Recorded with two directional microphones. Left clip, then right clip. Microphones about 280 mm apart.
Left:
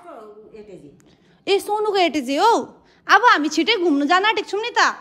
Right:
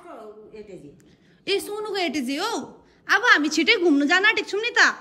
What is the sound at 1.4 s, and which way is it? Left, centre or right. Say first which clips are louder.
A woman's voice: left 7 dB; centre.